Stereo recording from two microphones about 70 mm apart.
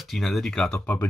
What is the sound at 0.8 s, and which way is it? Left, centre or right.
Speech, left.